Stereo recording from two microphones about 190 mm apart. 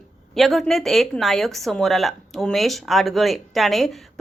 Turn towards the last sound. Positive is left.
turn(degrees=0)  # may be behind; listen again after turning